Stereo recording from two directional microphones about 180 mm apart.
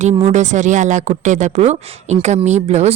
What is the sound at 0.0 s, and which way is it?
Speech, 40° right (ahead or behind).